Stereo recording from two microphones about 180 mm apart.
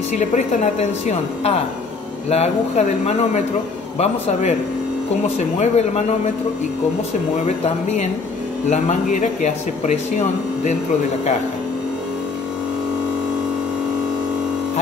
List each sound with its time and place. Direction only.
0.3 s speech: 40° left (ahead or behind)
7.4 s speech: 40° left (ahead or behind)